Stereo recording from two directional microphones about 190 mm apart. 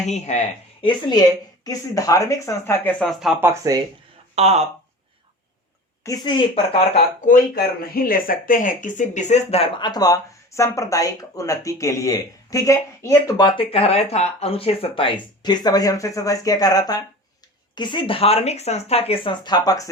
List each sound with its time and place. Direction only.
0.0 s speech: 35° left (ahead or behind)
0.9 s speech: 20° left (ahead or behind)
3.0 s speech: centre (ahead or behind)
3.4 s speech: 15° right (ahead or behind)
4.4 s speech: 35° right (ahead or behind)
6.0 s a woman's voice: 15° left (ahead or behind)
6.5 s speech: 30° left (ahead or behind)
7.3 s speech: 50° left (ahead or behind); by 19.9 s 20° left (ahead or behind)